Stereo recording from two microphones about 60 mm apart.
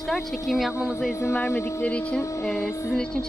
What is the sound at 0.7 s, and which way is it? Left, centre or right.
Speech, left.